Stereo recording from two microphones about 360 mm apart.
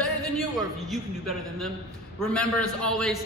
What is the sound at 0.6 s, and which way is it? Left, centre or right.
Speech, centre.